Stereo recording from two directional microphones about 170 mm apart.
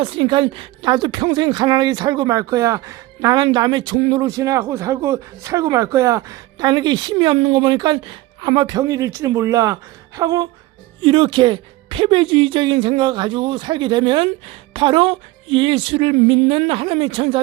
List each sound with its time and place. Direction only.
0.0 s speech: 30° right (ahead or behind)
11.0 s speech: 30° right (ahead or behind)